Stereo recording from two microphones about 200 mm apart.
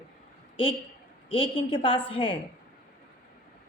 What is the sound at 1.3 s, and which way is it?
A woman's voice, 25° left (ahead or behind).